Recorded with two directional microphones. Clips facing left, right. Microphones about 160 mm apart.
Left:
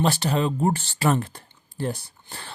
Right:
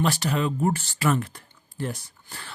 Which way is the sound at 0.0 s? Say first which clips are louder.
Left 2 dB; 30° left (ahead or behind).